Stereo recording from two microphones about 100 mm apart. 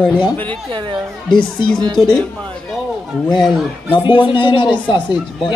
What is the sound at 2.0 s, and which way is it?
Speech, 5° left (ahead or behind).